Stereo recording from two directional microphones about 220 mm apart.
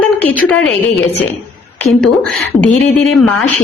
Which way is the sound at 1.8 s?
Centre (ahead or behind).